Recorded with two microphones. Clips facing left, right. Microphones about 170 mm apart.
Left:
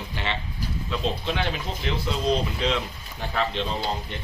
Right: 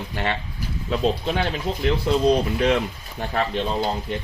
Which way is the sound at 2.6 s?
50° right (ahead or behind).